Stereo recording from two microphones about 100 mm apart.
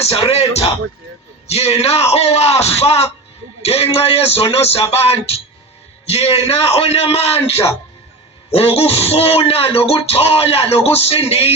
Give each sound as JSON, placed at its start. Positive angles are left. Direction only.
{"t": 0.0, "sound": "speech", "side_deg": 75}